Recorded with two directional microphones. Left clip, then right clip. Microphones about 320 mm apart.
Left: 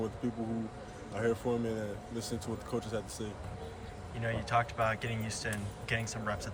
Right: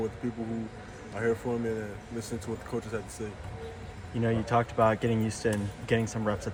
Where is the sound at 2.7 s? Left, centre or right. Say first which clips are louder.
Right 1 dB; centre.